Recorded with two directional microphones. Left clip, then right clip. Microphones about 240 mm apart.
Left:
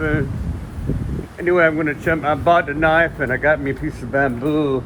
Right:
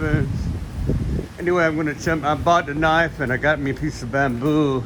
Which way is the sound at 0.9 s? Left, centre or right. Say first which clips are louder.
Right 1 dB; centre.